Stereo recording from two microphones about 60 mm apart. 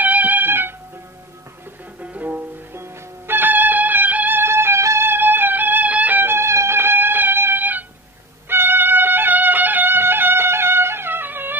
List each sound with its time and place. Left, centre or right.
0.0 s music: right
2.1 s music: right
2.7 s music: right
4.4 s music: right